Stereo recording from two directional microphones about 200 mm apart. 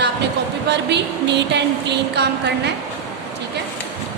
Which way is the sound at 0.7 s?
60° right (ahead or behind).